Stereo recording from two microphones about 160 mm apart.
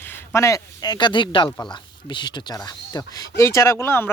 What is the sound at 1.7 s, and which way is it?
Speech, 30° left (ahead or behind).